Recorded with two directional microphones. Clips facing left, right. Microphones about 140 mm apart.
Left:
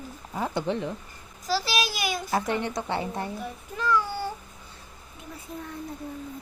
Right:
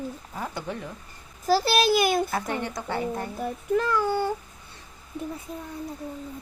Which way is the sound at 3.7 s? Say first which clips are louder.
Right 3 dB; 55° right (ahead or behind).